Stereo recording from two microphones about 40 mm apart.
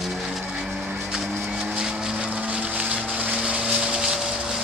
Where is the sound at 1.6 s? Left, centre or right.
Right.